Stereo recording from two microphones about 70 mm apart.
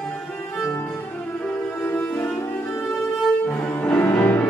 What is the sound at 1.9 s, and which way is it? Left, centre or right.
Cello, left.